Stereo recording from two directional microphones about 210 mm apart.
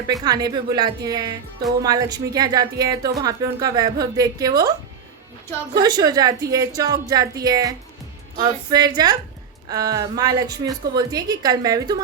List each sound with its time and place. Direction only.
0.1 s a woman's voice: 20° right (ahead or behind)
5.7 s a woman's voice: 20° right (ahead or behind)